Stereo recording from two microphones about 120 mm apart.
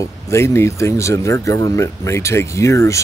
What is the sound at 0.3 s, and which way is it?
Speech, 25° left (ahead or behind).